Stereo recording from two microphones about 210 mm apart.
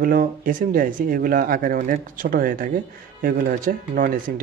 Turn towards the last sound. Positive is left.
turn(degrees=-40)  # may be behind; listen again after turning